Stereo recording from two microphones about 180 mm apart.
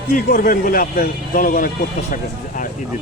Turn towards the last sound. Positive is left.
turn(degrees=55)  # may be behind; listen again after turning